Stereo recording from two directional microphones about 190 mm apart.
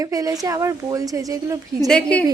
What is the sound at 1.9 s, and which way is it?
Speech, 5° left (ahead or behind).